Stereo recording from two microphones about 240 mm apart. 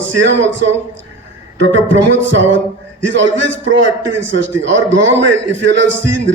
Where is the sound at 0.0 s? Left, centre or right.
Right.